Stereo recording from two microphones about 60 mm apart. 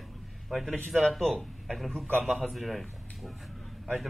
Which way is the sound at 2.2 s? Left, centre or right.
Centre.